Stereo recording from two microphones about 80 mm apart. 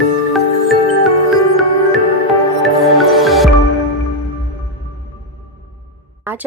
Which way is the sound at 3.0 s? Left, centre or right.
Centre.